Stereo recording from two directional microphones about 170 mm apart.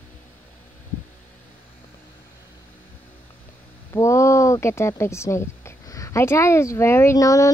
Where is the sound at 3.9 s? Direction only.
15° left (ahead or behind).